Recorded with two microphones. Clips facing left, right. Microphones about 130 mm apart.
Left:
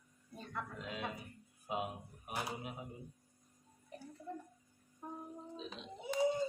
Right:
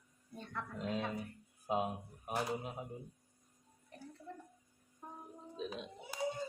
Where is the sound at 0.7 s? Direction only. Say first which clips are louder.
Right 7 dB; 40° right (ahead or behind).